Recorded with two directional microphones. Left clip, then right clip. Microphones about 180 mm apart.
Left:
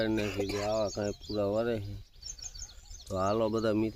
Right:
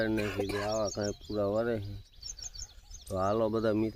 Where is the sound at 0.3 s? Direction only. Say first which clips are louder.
Even; 40° right (ahead or behind).